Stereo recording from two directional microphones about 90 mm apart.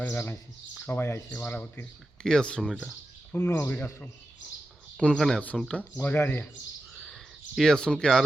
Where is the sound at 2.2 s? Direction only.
10° left (ahead or behind).